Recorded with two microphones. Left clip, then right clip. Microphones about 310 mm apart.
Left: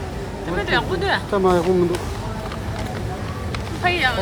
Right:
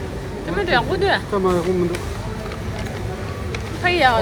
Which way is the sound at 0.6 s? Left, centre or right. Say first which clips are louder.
Right 3 dB; centre.